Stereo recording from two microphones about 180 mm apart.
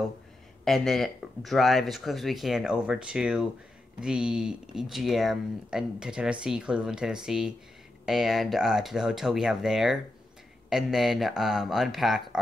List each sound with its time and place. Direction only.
0.7 s speech: centre (ahead or behind)